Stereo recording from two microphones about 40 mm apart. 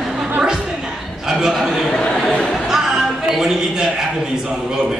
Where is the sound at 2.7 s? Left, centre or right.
Centre.